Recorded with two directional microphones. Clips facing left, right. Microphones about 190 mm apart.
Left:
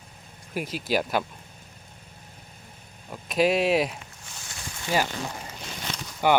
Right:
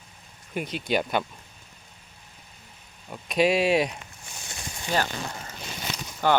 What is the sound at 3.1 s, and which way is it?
Speech, centre (ahead or behind).